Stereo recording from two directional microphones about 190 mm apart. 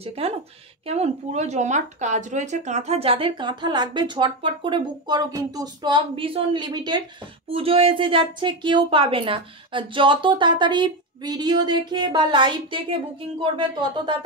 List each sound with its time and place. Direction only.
0.0 s speech: 30° right (ahead or behind)